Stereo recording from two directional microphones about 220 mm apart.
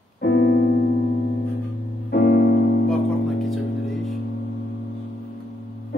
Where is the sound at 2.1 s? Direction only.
45° left (ahead or behind).